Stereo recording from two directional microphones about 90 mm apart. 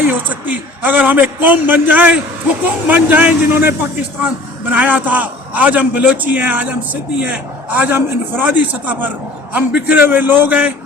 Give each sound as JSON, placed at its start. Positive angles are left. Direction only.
{"t": 0.1, "sound": "a man's voice", "side_deg": -20}